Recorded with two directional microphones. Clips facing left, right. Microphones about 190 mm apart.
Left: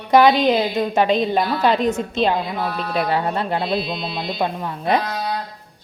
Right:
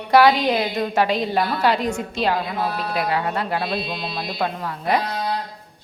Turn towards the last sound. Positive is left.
turn(degrees=20)  # may be behind; listen again after turning